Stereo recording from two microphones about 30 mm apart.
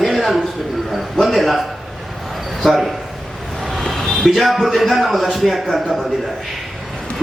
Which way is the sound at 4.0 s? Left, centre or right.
Left.